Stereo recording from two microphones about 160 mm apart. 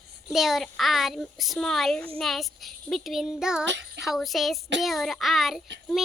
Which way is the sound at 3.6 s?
90° right.